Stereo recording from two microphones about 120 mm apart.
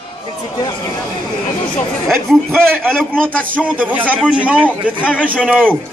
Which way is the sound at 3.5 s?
15° right (ahead or behind).